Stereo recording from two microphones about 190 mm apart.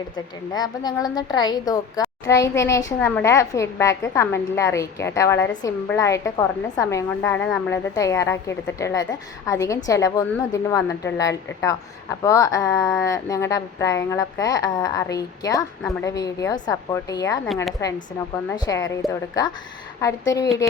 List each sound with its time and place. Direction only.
0.5 s a woman's voice: 20° left (ahead or behind)
18.5 s speech: 20° left (ahead or behind)
20.0 s a woman's voice: 15° left (ahead or behind)